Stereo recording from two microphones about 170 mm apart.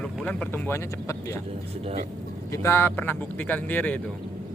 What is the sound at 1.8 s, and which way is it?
Speech, 45° right (ahead or behind).